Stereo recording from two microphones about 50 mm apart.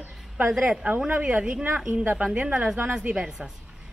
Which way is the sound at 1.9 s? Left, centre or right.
Right.